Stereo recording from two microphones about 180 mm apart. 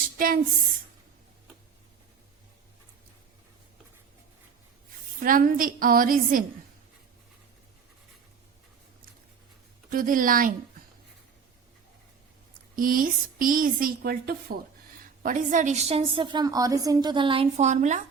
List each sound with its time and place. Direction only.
5.2 s a woman's voice: 50° right (ahead or behind)
9.9 s a woman's voice: 50° right (ahead or behind)
12.7 s a woman's voice: 50° right (ahead or behind)
15.2 s a woman's voice: 45° right (ahead or behind)